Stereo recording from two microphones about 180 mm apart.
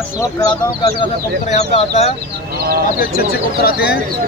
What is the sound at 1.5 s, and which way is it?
Speech, 40° left (ahead or behind).